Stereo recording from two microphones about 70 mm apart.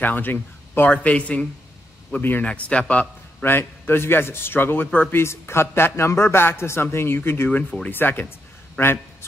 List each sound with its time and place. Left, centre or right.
0.0 s speech: left
2.1 s speech: left
2.4 s a man's voice: centre
3.4 s speech: left
5.1 s speech: left